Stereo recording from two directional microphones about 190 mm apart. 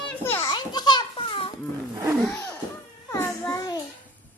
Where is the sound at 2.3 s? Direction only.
15° left (ahead or behind).